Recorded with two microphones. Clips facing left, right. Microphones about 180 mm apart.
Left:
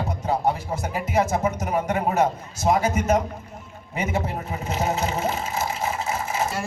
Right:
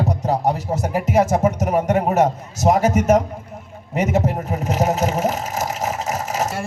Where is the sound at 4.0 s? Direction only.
45° right (ahead or behind).